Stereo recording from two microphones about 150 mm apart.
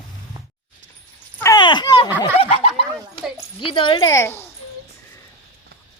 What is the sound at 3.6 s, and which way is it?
Speech, 35° left (ahead or behind).